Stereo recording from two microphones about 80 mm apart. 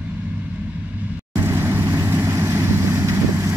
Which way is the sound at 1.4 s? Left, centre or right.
Right.